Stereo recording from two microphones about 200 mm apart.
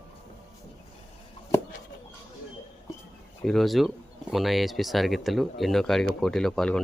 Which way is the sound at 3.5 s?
Centre (ahead or behind).